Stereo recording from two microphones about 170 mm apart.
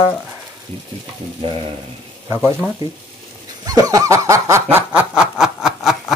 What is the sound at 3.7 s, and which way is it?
Snicker, 20° right (ahead or behind).